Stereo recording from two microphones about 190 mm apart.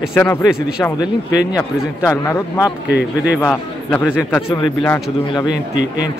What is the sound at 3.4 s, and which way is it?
A man's voice, 10° left (ahead or behind).